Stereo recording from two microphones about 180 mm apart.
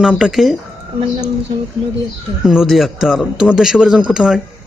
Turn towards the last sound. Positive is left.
turn(degrees=-5)  # may be behind; listen again after turning